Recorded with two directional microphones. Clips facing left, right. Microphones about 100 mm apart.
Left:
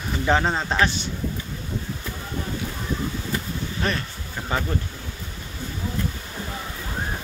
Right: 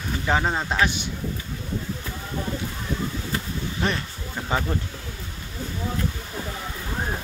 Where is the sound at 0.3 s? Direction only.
Centre (ahead or behind).